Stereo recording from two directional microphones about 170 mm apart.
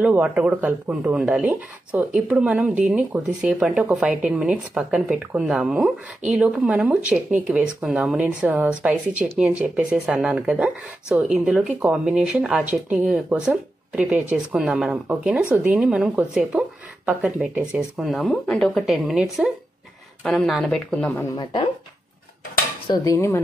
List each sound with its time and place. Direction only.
0.0 s a woman's voice: 5° right (ahead or behind)
21.4 s speech: 30° left (ahead or behind)
22.8 s dishes: 20° left (ahead or behind)